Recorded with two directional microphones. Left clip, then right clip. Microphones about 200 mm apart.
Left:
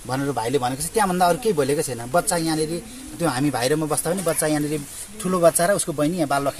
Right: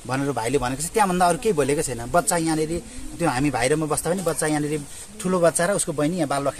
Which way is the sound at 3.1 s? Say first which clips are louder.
Even; centre (ahead or behind).